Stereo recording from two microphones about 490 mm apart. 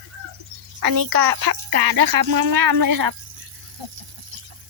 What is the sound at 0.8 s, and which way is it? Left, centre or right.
Speech, right.